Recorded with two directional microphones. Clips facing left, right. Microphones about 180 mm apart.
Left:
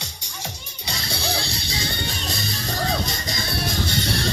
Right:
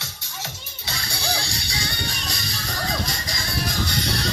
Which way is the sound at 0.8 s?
25° left (ahead or behind).